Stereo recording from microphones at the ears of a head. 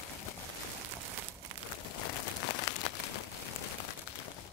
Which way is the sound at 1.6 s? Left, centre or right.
Left.